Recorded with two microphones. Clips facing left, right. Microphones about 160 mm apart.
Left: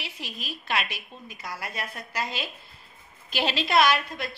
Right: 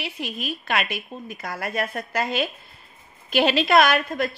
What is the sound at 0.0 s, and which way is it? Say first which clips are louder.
A woman's voice: right 8 dB; 55° right (ahead or behind).